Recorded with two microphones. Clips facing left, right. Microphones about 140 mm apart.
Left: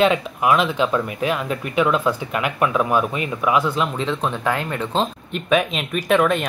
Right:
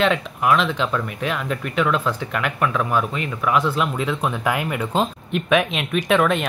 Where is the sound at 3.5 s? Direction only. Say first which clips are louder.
Right 2 dB; centre (ahead or behind).